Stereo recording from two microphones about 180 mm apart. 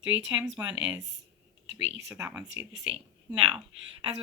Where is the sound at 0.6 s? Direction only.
15° right (ahead or behind).